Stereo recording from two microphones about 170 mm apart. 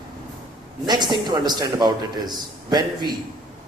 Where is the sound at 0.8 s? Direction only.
25° right (ahead or behind).